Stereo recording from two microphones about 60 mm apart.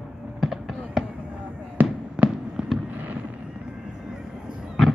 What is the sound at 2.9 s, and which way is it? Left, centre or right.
Fireworks, right.